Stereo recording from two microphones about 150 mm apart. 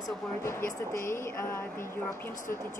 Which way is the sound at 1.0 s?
15° left (ahead or behind).